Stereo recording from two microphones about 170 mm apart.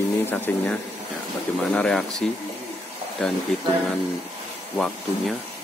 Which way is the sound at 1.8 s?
5° left (ahead or behind).